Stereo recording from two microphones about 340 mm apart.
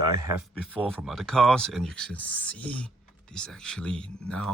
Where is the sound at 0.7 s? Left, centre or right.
Centre.